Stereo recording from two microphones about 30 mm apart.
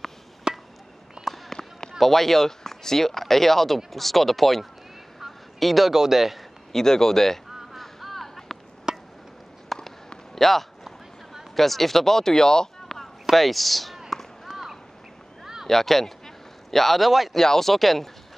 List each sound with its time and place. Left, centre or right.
0.5 s chop: right
1.2 s a sound: centre
1.6 s basketball bounce: centre
2.0 s a man's voice: centre
5.9 s a man's voice: centre
6.7 s speech: centre
7.7 s a sound: centre
8.9 s chop: right
9.7 s walk: centre
10.3 s speech: centre
14.1 s a sound: centre
15.6 s a man's voice: centre
17.3 s speech: centre